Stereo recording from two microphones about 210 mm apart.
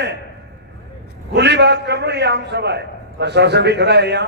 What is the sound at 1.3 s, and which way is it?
A man's voice, 55° right (ahead or behind).